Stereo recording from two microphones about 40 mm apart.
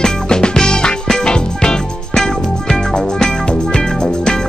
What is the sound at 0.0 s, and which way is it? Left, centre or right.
Music, centre.